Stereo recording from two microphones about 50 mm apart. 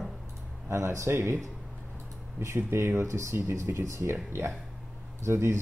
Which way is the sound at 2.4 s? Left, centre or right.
Right.